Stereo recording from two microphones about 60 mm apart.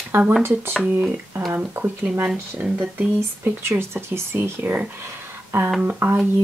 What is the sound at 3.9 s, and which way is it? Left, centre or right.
Speech, right.